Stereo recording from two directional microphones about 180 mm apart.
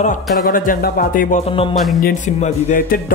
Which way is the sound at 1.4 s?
30° left (ahead or behind).